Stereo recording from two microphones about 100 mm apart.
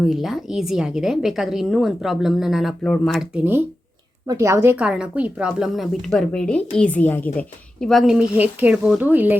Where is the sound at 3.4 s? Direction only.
20° right (ahead or behind).